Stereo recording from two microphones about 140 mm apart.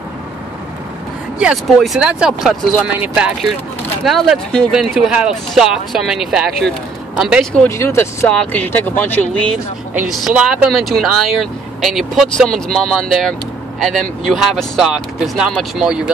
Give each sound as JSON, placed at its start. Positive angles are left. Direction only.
{"t": 1.4, "sound": "speech", "side_deg": -5}
{"t": 7.7, "sound": "speech", "side_deg": 20}
{"t": 9.9, "sound": "speech", "side_deg": -5}